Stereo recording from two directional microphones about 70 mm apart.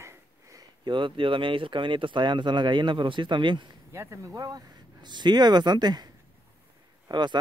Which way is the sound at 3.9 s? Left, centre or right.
Right.